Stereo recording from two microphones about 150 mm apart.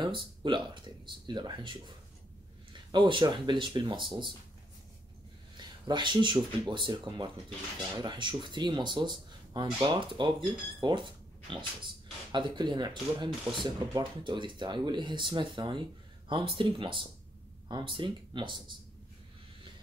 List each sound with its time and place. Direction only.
0.0 s speech: 30° right (ahead or behind)
5.6 s speech: 30° right (ahead or behind)